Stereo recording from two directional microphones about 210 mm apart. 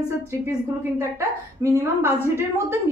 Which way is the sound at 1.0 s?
15° right (ahead or behind).